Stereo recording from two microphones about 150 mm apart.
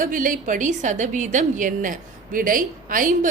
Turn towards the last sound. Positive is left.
turn(degrees=-65)  # may be behind; listen again after turning